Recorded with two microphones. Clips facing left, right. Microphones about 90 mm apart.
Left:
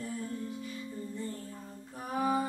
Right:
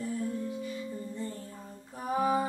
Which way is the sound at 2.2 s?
20° right (ahead or behind).